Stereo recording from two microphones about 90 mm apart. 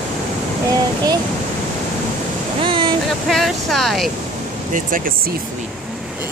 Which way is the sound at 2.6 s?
70° right (ahead or behind).